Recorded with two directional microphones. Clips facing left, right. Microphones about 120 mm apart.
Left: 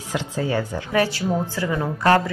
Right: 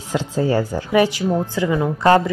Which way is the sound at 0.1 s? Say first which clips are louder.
Right 5 dB; 35° right (ahead or behind).